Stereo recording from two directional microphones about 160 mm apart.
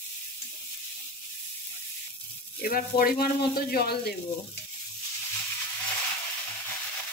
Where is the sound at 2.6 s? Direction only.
70° left (ahead or behind).